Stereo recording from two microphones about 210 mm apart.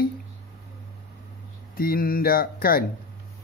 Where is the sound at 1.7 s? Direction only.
45° left (ahead or behind).